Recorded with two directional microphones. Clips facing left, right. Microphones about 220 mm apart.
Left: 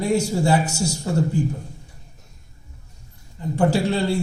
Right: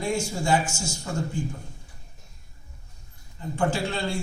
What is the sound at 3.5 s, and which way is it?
Speech, 35° left (ahead or behind).